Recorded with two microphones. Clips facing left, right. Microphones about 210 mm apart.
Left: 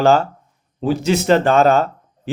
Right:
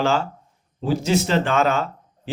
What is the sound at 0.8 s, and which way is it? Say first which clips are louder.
Speech: left 3 dB; 65° left (ahead or behind).